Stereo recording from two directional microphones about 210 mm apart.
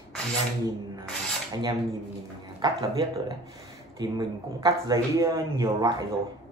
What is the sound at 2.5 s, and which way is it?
Speech, 15° right (ahead or behind).